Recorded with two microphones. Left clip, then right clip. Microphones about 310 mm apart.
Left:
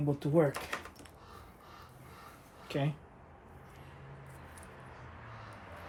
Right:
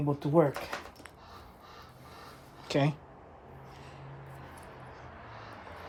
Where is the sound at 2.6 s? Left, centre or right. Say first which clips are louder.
Right 7 dB; centre.